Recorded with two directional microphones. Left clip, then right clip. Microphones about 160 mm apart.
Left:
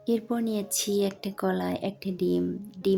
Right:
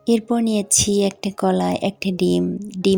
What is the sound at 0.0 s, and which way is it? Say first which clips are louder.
Speech: right 9 dB; 45° right (ahead or behind).